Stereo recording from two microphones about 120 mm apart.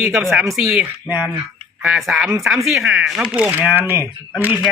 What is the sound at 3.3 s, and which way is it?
Speech, 15° right (ahead or behind).